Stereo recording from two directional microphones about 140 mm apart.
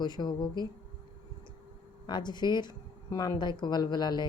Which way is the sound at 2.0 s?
30° left (ahead or behind).